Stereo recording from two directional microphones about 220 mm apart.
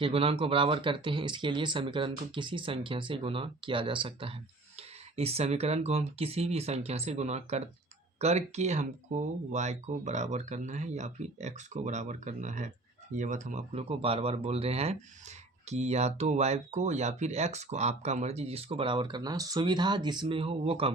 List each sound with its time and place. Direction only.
0.0 s speech: 25° right (ahead or behind)